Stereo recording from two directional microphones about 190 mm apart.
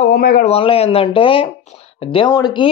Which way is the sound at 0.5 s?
30° left (ahead or behind).